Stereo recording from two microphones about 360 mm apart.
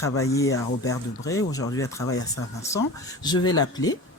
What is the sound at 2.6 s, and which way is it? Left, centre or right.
Speech, centre.